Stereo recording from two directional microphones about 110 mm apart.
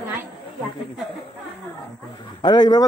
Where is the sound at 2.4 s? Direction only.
40° left (ahead or behind).